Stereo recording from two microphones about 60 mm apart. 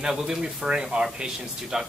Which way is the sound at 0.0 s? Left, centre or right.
Centre.